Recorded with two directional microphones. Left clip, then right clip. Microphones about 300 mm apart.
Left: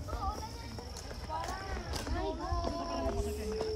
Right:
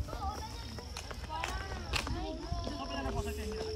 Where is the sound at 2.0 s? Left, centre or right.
Centre.